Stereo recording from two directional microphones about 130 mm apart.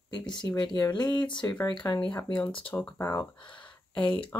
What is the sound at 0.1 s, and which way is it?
Speech, 35° left (ahead or behind).